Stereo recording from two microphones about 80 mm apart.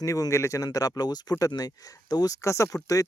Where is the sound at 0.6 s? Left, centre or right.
Left.